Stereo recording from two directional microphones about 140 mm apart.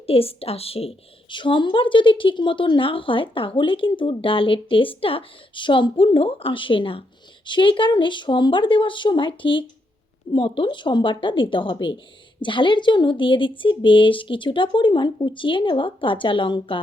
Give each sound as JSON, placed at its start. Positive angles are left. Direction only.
{"t": 0.1, "sound": "a woman's voice", "side_deg": 45}